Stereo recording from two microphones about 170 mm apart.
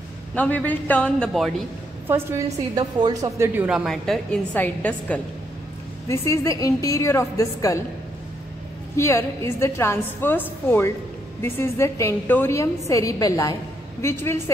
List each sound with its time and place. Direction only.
0.3 s a woman's voice: 10° left (ahead or behind)
2.0 s a woman's voice: 15° right (ahead or behind); by 7.8 s 20° left (ahead or behind)
8.9 s a woman's voice: 15° left (ahead or behind)